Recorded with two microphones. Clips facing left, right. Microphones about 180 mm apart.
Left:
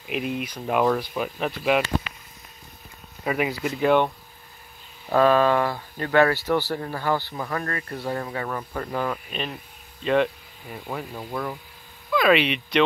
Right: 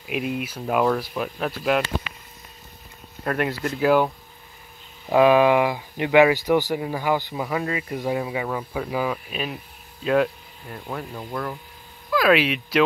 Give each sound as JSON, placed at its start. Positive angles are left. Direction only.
{"t": 0.0, "sound": "speech", "side_deg": 0}
{"t": 3.3, "sound": "speech", "side_deg": 0}
{"t": 5.1, "sound": "speech", "side_deg": -15}